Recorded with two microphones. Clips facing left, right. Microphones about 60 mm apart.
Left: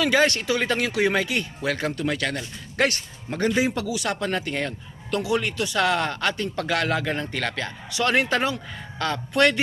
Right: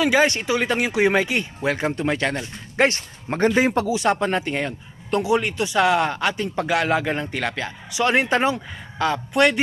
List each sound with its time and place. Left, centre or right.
0.0 s speech: centre; by 3.8 s right
3.8 s speech: right